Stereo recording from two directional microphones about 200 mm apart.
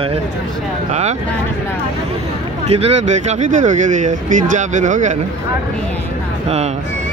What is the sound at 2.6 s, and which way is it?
Speech, 30° right (ahead or behind).